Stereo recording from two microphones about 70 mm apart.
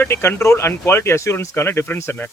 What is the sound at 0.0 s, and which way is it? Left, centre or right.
Speech, left.